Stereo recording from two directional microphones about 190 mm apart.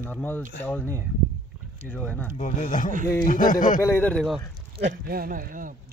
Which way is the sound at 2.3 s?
40° left (ahead or behind).